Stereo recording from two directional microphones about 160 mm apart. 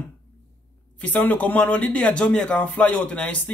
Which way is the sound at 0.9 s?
10° left (ahead or behind).